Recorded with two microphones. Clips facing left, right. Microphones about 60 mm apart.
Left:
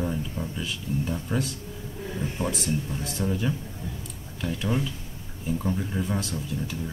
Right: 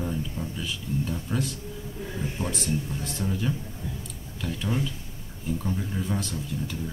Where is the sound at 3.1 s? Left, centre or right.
Centre.